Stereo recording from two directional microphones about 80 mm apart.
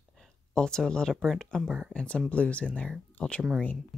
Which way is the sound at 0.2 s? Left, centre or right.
Centre.